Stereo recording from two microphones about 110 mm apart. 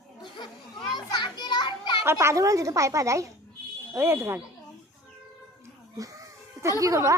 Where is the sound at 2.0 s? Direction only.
25° right (ahead or behind).